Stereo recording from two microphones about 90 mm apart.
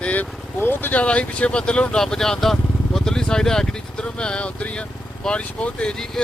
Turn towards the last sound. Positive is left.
turn(degrees=5)  # may be behind; listen again after turning